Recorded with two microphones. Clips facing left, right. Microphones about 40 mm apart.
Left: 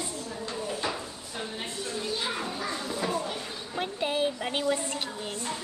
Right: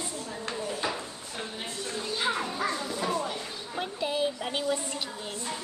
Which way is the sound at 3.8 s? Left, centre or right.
Left.